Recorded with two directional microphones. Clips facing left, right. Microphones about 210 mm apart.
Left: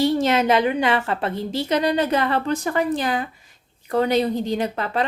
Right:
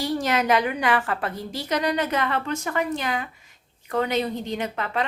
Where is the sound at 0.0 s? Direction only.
25° left (ahead or behind).